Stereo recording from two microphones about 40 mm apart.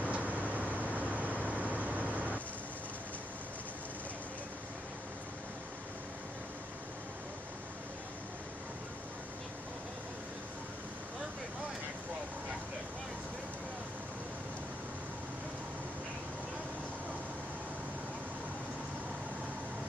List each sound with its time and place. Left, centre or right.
0.0 s vehicle: right